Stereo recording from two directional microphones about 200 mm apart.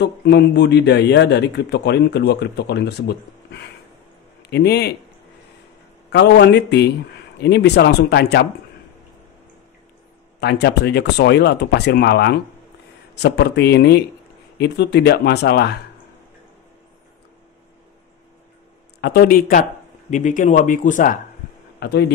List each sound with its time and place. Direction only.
0.0 s a man's voice: 55° left (ahead or behind)
6.1 s a man's voice: 60° left (ahead or behind)
10.4 s a man's voice: 55° left (ahead or behind)
18.9 s speech: 50° left (ahead or behind)
21.7 s speech: 55° left (ahead or behind)